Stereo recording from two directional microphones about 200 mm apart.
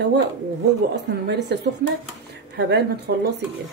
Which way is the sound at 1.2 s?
55° right (ahead or behind).